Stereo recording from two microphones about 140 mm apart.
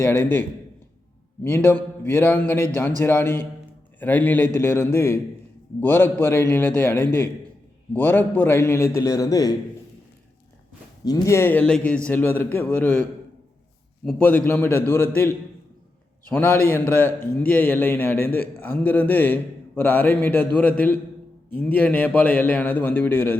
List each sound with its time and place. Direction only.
0.0 s a man's voice: 15° left (ahead or behind)
1.5 s a man's voice: 15° left (ahead or behind)
11.0 s a man's voice: 25° left (ahead or behind)